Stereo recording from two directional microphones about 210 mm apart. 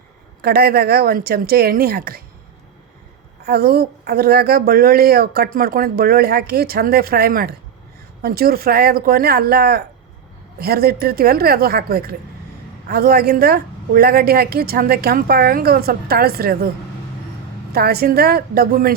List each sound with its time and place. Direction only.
0.4 s speech: 50° right (ahead or behind)
3.4 s speech: 50° right (ahead or behind)
17.7 s speech: 50° right (ahead or behind)